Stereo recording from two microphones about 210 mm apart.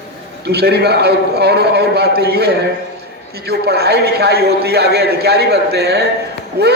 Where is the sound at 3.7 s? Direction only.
50° right (ahead or behind).